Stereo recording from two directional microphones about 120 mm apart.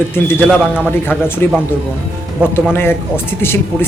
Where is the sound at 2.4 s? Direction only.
10° right (ahead or behind).